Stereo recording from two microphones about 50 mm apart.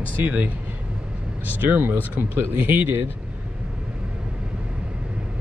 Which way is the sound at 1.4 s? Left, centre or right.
Right.